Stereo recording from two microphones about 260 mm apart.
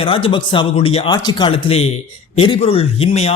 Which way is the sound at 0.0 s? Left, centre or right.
Left.